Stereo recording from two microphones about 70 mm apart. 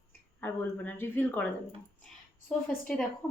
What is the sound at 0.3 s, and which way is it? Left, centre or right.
A woman's voice, left.